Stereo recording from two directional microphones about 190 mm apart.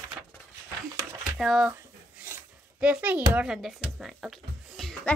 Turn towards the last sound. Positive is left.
turn(degrees=0)  # may be behind; listen again after turning